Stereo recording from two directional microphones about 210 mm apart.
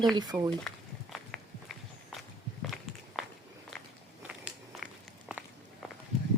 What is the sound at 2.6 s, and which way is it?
Walk, centre (ahead or behind).